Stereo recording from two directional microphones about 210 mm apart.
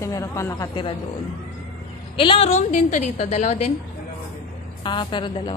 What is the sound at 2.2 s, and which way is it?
A woman's voice, 25° left (ahead or behind).